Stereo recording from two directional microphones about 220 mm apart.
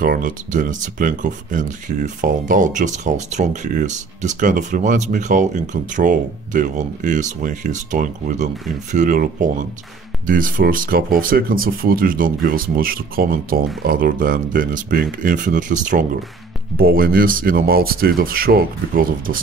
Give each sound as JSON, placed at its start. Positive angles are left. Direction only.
{"t": 0.0, "sound": "speech", "side_deg": -40}